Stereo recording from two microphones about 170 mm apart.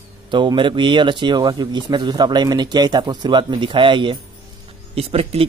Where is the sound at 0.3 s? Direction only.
30° right (ahead or behind).